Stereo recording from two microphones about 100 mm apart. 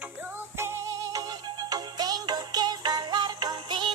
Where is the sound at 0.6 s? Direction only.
30° right (ahead or behind).